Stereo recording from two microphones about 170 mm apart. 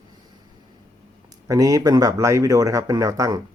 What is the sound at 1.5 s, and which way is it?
Speech, 20° right (ahead or behind).